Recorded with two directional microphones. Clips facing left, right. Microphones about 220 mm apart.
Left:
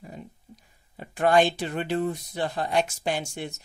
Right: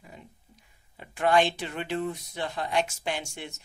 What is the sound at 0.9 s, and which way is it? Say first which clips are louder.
A woman's voice: left 3 dB; 40° left (ahead or behind).